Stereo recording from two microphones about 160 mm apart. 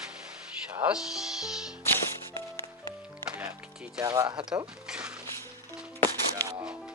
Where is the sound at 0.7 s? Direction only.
10° right (ahead or behind).